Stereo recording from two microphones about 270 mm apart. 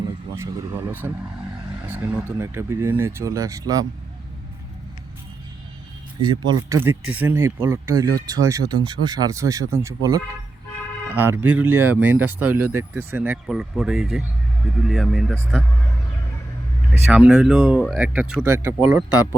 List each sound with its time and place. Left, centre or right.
0.3 s speech: centre
6.5 s speech: centre
16.9 s speech: centre